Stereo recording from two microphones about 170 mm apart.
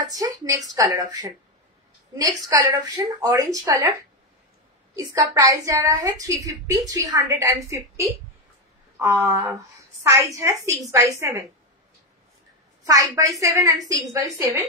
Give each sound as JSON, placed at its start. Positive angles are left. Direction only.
{"t": 0.2, "sound": "a woman's voice", "side_deg": -20}
{"t": 4.9, "sound": "a woman's voice", "side_deg": -20}
{"t": 12.8, "sound": "a woman's voice", "side_deg": -20}